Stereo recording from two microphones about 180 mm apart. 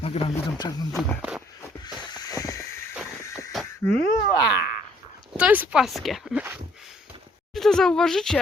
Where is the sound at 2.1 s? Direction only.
20° left (ahead or behind).